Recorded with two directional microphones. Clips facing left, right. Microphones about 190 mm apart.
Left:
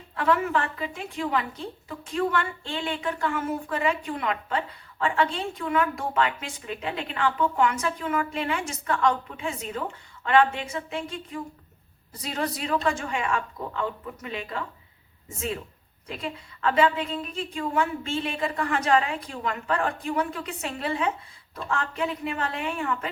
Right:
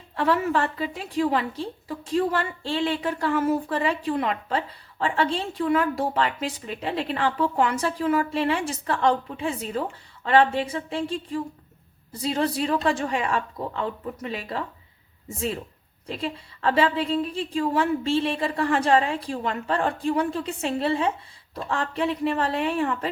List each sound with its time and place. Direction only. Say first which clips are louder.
0.2 s speech: right 2 dB; 30° right (ahead or behind)
16.0 s speech: right 4 dB; 30° right (ahead or behind)